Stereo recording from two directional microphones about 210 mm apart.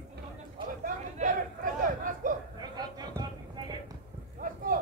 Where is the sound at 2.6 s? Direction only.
20° right (ahead or behind).